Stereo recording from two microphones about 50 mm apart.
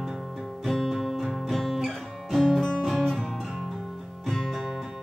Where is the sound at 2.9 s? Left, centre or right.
Centre.